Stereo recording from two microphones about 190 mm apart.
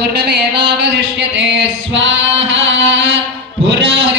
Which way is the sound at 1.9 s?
75° right (ahead or behind).